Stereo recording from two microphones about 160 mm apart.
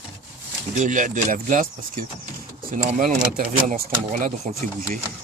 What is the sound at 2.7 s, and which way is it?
Speech, 50° right (ahead or behind).